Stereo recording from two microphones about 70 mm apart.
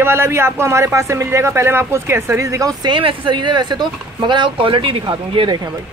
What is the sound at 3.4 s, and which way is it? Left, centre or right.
Speech, right.